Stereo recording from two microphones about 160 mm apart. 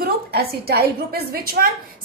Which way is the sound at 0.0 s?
75° right (ahead or behind).